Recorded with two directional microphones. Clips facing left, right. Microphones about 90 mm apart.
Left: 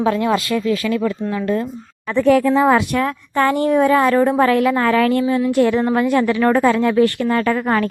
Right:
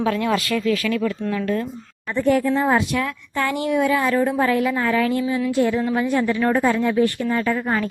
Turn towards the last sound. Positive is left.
turn(degrees=70)  # may be behind; listen again after turning